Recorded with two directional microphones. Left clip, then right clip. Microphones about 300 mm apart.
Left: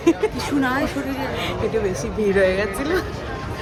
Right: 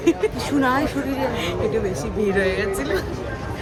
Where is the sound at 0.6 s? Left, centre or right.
Centre.